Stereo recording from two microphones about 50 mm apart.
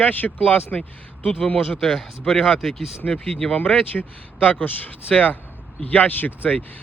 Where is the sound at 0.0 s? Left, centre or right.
Left.